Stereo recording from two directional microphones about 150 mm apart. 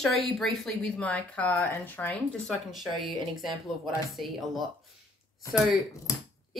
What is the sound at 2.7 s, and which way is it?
Speech, centre (ahead or behind).